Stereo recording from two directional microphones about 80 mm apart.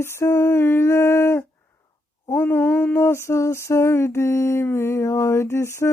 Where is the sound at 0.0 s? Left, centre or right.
Left.